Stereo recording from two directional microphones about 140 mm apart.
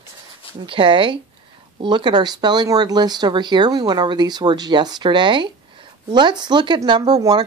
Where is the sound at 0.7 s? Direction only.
40° right (ahead or behind).